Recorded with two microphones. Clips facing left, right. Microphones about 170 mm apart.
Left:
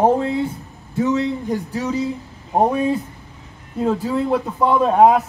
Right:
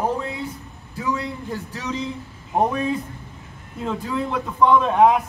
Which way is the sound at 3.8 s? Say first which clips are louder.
Left 6 dB; 40° left (ahead or behind).